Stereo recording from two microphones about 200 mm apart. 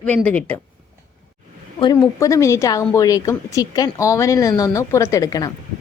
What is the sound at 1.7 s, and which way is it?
Speech, 20° left (ahead or behind).